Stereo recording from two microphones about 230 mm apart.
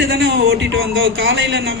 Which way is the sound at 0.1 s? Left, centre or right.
Right.